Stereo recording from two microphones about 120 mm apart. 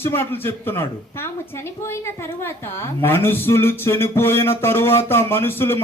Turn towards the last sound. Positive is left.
turn(degrees=20)  # may be behind; listen again after turning